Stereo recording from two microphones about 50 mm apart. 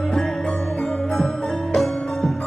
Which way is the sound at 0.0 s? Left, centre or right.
Centre.